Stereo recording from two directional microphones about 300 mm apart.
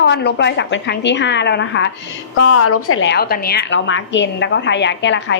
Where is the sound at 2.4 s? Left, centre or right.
Left.